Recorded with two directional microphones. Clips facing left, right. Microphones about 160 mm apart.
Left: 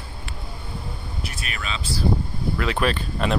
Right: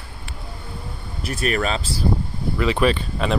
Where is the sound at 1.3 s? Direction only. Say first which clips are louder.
Right 14 dB; 40° right (ahead or behind).